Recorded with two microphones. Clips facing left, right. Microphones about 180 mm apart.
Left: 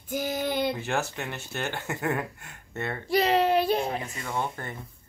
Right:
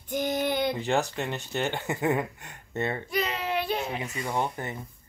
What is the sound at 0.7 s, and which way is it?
Speech, 15° right (ahead or behind).